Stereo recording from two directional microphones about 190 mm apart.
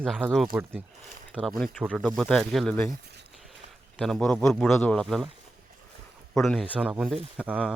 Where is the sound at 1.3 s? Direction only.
5° left (ahead or behind).